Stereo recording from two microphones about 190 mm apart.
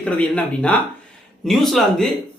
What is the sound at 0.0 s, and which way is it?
Speech, 5° left (ahead or behind).